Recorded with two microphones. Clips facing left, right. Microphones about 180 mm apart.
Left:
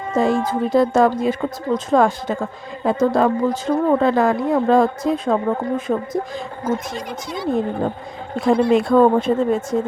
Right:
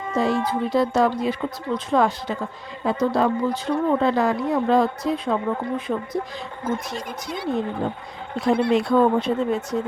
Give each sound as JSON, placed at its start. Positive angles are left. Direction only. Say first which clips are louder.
{"t": 0.1, "sound": "a woman's voice", "louder": "left 4 dB", "side_deg": 50}
{"t": 6.9, "sound": "speech", "louder": "left 3 dB", "side_deg": -50}
{"t": 8.7, "sound": "a woman's voice", "louder": "left 5 dB", "side_deg": 50}